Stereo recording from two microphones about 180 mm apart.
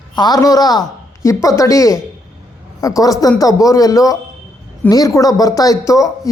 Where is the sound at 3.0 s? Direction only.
20° left (ahead or behind).